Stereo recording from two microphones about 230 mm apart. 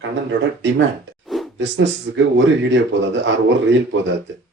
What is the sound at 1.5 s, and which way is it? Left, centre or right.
Speech, right.